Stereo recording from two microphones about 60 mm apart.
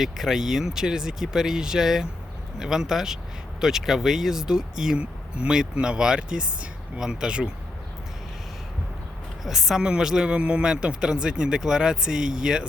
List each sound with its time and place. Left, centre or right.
0.0 s speech: centre
9.4 s speech: centre